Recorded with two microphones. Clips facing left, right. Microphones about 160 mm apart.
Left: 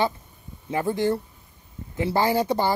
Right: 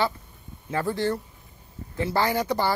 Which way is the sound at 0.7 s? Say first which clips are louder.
Left 2 dB; 20° left (ahead or behind).